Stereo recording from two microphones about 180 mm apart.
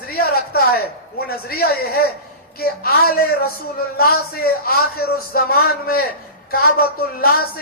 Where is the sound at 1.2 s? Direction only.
60° left (ahead or behind).